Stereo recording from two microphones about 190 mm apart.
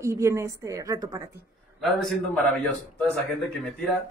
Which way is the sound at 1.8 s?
Centre (ahead or behind).